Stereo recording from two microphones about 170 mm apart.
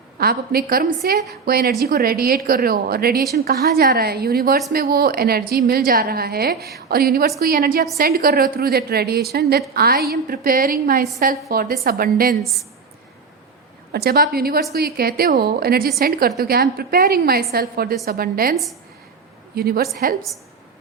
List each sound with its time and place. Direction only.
0.2 s a woman's voice: 60° right (ahead or behind)
12.4 s a woman's voice: centre (ahead or behind)
13.9 s a woman's voice: 65° right (ahead or behind)
19.5 s a woman's voice: 65° right (ahead or behind)